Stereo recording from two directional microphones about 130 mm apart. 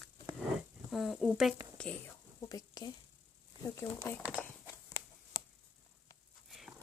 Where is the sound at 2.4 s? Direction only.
30° left (ahead or behind).